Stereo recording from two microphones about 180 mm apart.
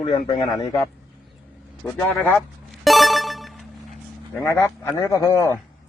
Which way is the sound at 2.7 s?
Centre (ahead or behind).